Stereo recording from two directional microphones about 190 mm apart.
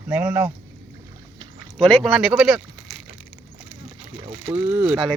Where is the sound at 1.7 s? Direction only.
Centre (ahead or behind).